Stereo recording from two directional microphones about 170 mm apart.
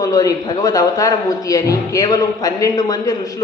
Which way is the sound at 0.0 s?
20° left (ahead or behind).